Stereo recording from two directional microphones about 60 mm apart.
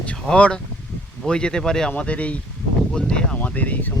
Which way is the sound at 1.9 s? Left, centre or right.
Left.